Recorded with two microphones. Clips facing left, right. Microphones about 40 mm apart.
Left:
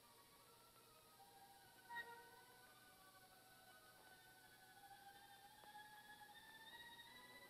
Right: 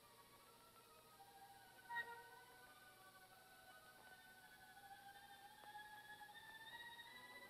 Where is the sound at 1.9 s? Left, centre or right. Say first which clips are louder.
Right 4 dB; centre.